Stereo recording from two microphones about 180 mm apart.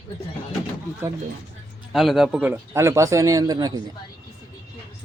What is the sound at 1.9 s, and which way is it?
A man's voice, centre (ahead or behind).